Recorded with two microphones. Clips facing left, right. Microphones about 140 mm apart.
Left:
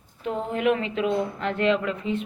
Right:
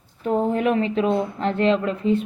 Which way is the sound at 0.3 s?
40° right (ahead or behind).